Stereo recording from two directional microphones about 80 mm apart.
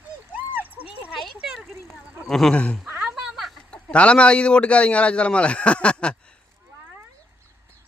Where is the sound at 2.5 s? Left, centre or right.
Centre.